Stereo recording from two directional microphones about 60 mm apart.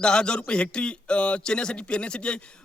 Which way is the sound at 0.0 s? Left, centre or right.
Centre.